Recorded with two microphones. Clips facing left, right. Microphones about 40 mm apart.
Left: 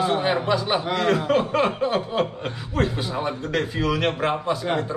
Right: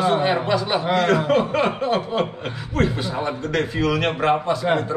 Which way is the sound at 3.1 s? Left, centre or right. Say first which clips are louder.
Right 2 dB; centre.